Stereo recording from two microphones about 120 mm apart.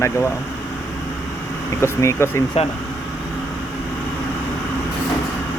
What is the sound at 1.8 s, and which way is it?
Speech, 25° left (ahead or behind).